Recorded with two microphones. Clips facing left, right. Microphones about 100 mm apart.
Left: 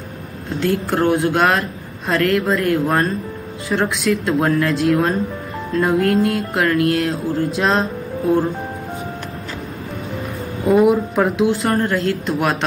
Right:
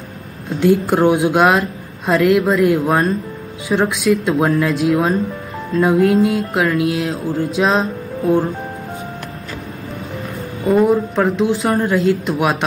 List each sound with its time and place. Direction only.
0.6 s music: 5° right (ahead or behind)
10.7 s music: 5° left (ahead or behind)